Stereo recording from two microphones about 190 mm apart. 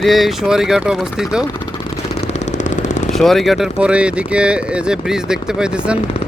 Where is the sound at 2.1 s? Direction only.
40° left (ahead or behind).